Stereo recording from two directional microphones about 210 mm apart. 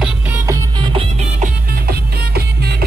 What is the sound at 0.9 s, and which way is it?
Music, 30° right (ahead or behind).